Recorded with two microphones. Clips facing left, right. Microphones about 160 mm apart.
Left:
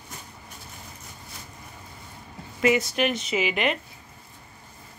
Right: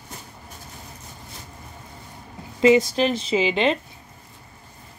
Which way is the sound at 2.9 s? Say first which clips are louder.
Right 4 dB; 30° right (ahead or behind).